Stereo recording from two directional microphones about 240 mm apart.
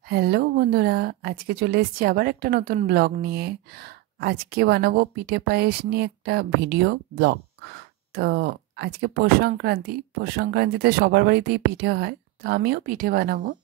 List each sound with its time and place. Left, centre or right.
0.1 s a woman's voice: right